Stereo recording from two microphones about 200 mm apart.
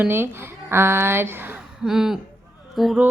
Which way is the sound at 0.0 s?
10° right (ahead or behind).